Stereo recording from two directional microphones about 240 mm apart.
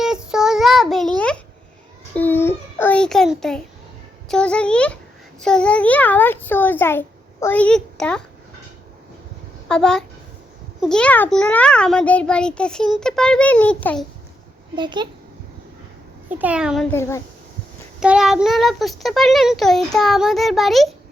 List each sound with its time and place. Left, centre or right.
0.0 s child singing: centre
4.3 s a child's voice: centre
9.6 s a child's voice: centre
14.8 s a child's voice: centre
16.3 s a child's voice: centre
18.0 s a child's voice: centre